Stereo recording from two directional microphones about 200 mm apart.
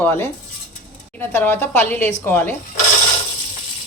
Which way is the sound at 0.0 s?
10° left (ahead or behind).